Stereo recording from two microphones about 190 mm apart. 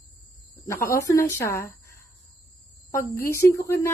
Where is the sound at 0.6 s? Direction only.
15° left (ahead or behind).